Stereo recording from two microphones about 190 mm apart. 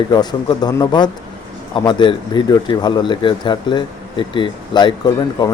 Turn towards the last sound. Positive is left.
turn(degrees=20)  # may be behind; listen again after turning